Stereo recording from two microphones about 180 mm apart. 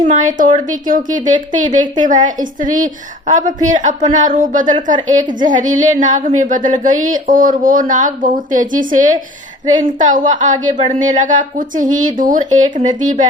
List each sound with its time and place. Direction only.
0.1 s speech: 45° right (ahead or behind)